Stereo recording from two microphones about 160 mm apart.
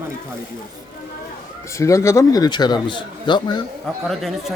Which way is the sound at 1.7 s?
20° left (ahead or behind).